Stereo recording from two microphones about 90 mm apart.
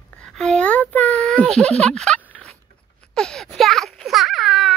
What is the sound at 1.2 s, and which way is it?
Speech, 5° left (ahead or behind).